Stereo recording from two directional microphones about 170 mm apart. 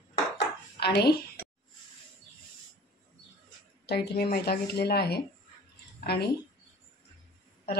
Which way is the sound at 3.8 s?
70° left (ahead or behind).